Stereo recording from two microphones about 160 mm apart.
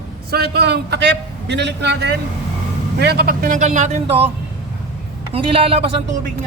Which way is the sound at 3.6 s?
50° right (ahead or behind).